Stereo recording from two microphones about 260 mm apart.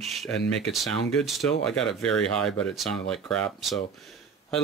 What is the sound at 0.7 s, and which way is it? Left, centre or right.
Speech, centre.